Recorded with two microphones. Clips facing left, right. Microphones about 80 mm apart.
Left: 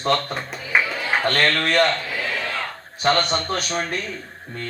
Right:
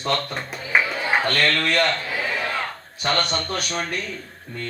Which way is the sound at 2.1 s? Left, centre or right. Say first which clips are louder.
Right 1 dB; centre.